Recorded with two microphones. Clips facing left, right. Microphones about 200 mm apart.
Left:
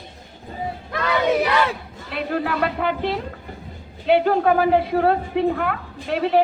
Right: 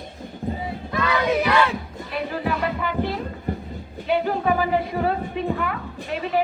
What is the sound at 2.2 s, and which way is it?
A woman's voice, 65° left (ahead or behind).